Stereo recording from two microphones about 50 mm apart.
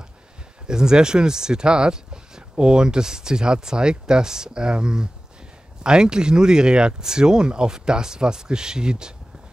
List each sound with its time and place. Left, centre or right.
0.7 s speech: centre